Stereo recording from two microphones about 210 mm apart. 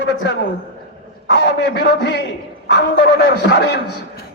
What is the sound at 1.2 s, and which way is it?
A man's voice, 55° left (ahead or behind).